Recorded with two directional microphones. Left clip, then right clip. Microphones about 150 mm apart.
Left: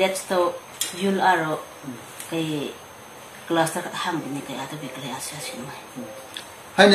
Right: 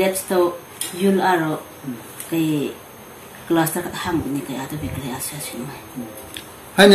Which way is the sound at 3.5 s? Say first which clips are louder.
Right 2 dB; 15° left (ahead or behind).